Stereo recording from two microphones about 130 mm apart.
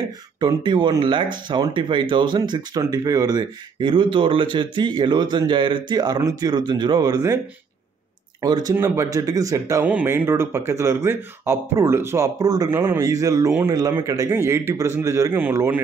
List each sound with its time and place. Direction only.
0.4 s speech: 35° right (ahead or behind)
8.4 s speech: 30° right (ahead or behind)
8.7 s speech: 20° right (ahead or behind)
9.8 s speech: 15° right (ahead or behind)